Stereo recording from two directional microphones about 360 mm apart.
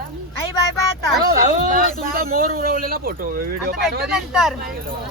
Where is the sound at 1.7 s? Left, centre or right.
Right.